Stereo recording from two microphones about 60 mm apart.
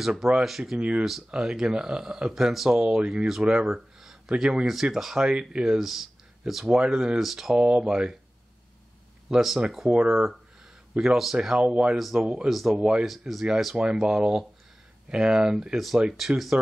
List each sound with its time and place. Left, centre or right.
0.0 s speech: centre
0.7 s speech: centre
1.0 s speech: centre
4.3 s speech: centre
9.3 s speech: centre
11.3 s speech: centre
12.0 s speech: centre